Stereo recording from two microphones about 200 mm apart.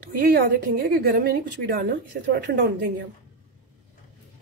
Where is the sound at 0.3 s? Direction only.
50° right (ahead or behind).